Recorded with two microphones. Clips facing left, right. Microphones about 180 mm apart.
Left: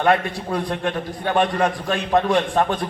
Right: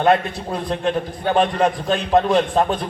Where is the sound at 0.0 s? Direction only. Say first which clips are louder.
Right 2 dB; 20° right (ahead or behind).